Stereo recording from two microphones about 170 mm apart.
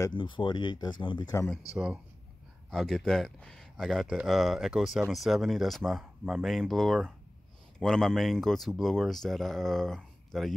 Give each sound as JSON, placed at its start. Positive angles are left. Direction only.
{"t": 0.0, "sound": "speech", "side_deg": 30}
{"t": 2.7, "sound": "speech", "side_deg": 0}